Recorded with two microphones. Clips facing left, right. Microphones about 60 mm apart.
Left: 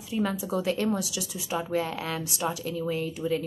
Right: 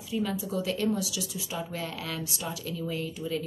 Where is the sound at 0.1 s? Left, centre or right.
Left.